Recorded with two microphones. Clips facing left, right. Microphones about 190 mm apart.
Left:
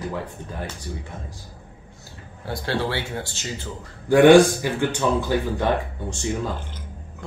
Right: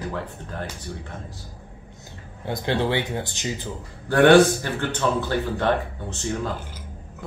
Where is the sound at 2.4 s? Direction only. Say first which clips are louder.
Right 2 dB; 20° right (ahead or behind).